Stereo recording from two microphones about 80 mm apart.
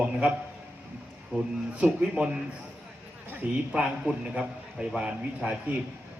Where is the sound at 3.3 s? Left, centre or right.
Centre.